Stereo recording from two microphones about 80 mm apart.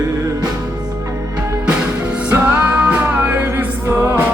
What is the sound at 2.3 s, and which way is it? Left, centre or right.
Music, right.